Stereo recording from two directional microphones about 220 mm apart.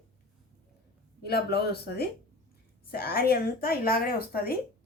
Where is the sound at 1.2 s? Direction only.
45° left (ahead or behind).